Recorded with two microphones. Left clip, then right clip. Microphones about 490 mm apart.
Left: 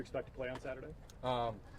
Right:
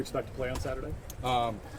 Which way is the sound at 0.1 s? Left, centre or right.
Left.